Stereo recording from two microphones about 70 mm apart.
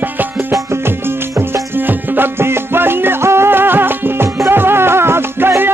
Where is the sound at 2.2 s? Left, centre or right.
Right.